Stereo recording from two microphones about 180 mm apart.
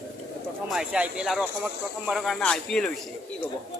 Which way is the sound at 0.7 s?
5° right (ahead or behind).